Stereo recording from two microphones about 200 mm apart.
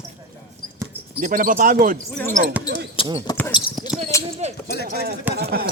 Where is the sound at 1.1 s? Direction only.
45° right (ahead or behind).